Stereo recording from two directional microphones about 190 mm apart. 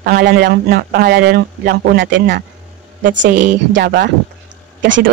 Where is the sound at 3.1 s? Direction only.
70° right (ahead or behind).